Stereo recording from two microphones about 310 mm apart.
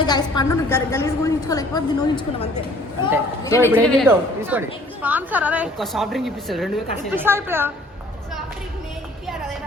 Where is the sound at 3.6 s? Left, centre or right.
Centre.